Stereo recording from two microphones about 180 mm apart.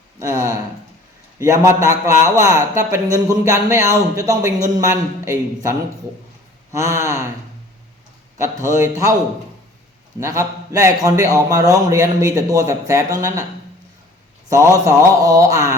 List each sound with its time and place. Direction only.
0.2 s a man's voice: 15° right (ahead or behind)
8.4 s a man's voice: 15° right (ahead or behind)
10.2 s a man's voice: 15° right (ahead or behind)
14.8 s a man's voice: 20° right (ahead or behind)